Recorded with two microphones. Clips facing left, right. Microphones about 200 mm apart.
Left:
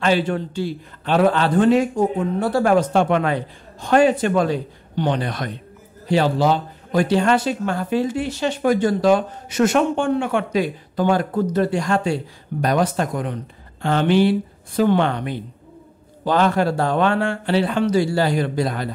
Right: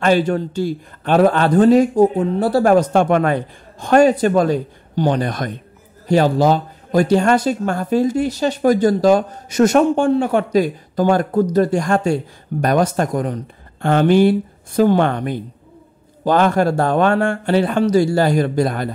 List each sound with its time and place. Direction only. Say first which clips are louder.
0.0 s a man's voice: right 4 dB; 45° right (ahead or behind)